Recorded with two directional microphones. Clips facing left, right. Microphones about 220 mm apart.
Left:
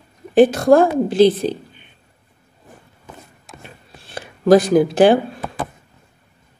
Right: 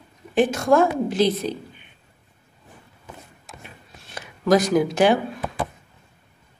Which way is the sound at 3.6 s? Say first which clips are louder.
Left 3 dB; 30° left (ahead or behind).